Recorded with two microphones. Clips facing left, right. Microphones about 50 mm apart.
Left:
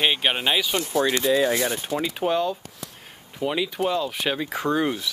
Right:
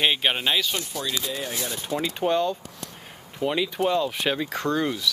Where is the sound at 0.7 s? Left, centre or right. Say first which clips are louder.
Left 8 dB; left.